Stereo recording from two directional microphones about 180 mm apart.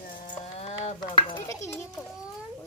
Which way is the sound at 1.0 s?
25° left (ahead or behind).